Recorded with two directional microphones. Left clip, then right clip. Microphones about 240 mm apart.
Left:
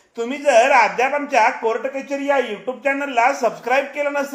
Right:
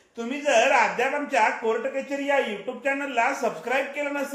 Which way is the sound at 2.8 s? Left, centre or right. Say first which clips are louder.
Left 7 dB; left.